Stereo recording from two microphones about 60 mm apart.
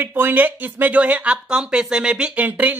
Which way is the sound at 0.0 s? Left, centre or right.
Right.